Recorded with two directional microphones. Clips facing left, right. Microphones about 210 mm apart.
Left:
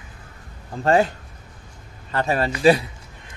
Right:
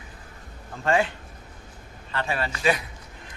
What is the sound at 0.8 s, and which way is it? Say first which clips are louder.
A woman's voice: left 5 dB; 40° left (ahead or behind).